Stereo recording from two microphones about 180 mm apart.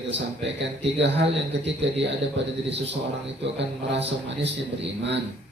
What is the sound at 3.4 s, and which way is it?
Speech, 75° right (ahead or behind).